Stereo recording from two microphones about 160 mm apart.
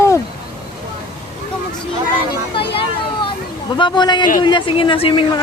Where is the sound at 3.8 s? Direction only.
30° left (ahead or behind).